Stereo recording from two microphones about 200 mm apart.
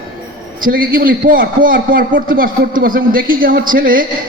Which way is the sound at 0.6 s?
45° right (ahead or behind).